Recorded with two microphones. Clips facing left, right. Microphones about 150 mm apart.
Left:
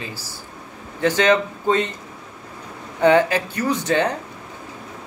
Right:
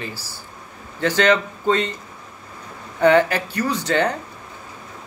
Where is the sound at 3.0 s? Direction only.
20° left (ahead or behind).